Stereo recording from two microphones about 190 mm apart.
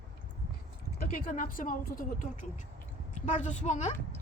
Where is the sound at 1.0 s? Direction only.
45° left (ahead or behind).